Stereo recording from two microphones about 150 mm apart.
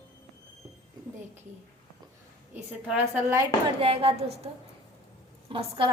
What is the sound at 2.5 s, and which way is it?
Speech, 10° right (ahead or behind).